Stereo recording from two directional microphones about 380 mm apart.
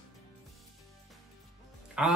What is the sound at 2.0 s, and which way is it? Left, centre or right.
Speech, centre.